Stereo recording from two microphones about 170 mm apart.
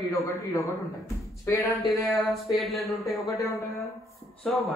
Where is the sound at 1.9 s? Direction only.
Centre (ahead or behind).